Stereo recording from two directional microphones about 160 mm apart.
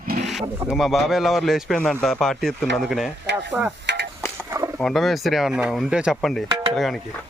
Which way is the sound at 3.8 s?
90° right.